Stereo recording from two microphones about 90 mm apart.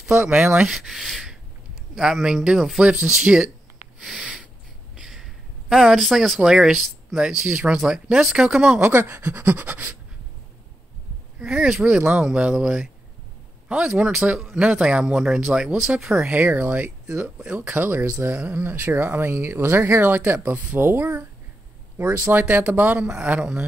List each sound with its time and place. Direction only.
0.2 s speech: 10° right (ahead or behind)
4.2 s snort: 10° right (ahead or behind)
4.9 s speech: 5° right (ahead or behind)
8.7 s speech: 25° right (ahead or behind)
11.3 s speech: 10° right (ahead or behind)
17.2 s speech: 10° right (ahead or behind)
17.6 s speech: 20° right (ahead or behind)
23.1 s speech: 10° right (ahead or behind)